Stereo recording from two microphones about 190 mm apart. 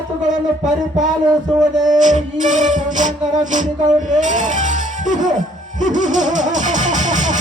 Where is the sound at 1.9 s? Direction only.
40° right (ahead or behind).